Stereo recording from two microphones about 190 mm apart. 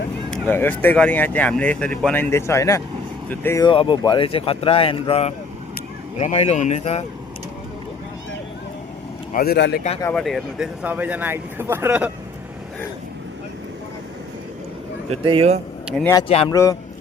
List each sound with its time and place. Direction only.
0.3 s speech: 5° left (ahead or behind)
3.7 s speech: 25° left (ahead or behind)
9.3 s speech: 55° left (ahead or behind)
10.0 s speech: 5° left (ahead or behind)
15.1 s speech: 30° right (ahead or behind)
16.5 s speech: 20° left (ahead or behind)